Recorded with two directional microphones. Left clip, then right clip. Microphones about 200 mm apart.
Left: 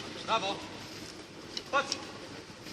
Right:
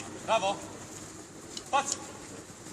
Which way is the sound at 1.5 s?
55° right (ahead or behind).